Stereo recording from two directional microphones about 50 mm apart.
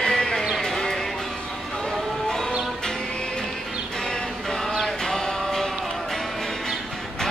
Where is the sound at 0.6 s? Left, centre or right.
Centre.